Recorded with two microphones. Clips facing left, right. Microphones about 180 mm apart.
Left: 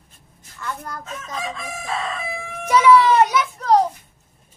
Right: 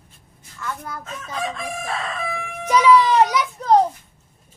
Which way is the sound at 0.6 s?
5° right (ahead or behind).